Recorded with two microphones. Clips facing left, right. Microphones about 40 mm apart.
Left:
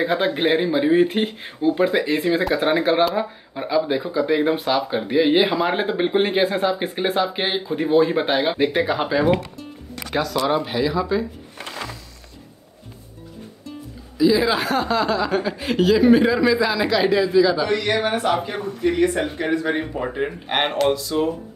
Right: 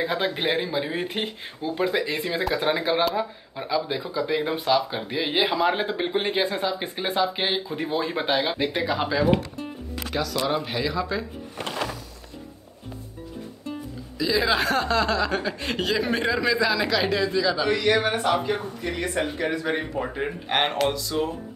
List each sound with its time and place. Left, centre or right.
0.0 s speech: centre
10.1 s speech: left
10.5 s speech: centre
14.1 s speech: centre